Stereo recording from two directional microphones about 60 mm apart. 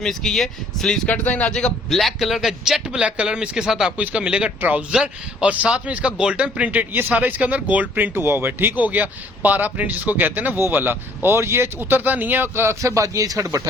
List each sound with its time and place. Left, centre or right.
0.0 s speech: centre
1.0 s speech: left
1.5 s speech: centre
2.0 s speech: centre
3.9 s speech: centre; by 11.7 s right
11.8 s speech: right
12.8 s speech: right